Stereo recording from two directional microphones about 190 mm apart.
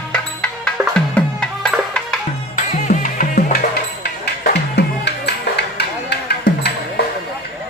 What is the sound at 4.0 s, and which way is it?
Music, 60° left (ahead or behind).